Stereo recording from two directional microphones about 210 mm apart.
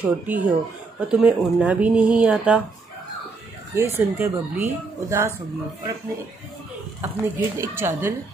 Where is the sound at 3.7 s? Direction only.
10° right (ahead or behind).